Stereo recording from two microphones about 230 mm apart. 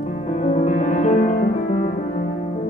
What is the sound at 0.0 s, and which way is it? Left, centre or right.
Music, left.